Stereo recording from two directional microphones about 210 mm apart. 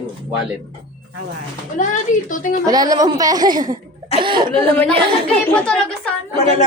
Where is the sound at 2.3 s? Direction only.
40° left (ahead or behind).